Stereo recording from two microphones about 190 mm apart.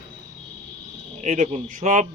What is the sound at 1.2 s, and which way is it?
Speech, 40° right (ahead or behind).